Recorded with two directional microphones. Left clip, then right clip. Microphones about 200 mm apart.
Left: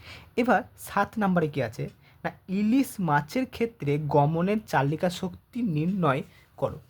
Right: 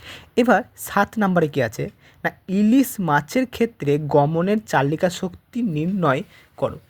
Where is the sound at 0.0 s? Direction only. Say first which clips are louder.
Right 8 dB; 15° right (ahead or behind).